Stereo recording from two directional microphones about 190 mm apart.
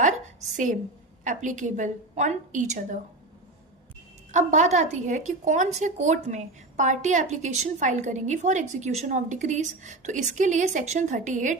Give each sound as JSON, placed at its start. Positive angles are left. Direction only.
{"t": 0.5, "sound": "a woman's voice", "side_deg": -45}
{"t": 4.3, "sound": "a woman's voice", "side_deg": -40}